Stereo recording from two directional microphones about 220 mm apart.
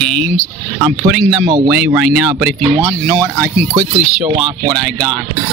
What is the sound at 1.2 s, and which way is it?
Speech, 20° right (ahead or behind).